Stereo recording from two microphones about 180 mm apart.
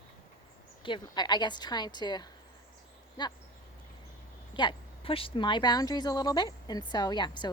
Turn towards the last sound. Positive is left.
turn(degrees=25)  # may be behind; listen again after turning